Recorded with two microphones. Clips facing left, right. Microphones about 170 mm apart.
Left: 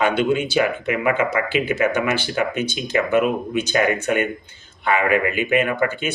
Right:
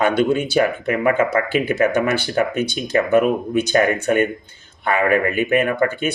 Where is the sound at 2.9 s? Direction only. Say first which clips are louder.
Right 3 dB; 40° right (ahead or behind).